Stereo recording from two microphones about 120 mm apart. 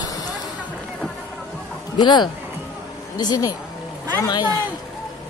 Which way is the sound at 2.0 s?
40° left (ahead or behind).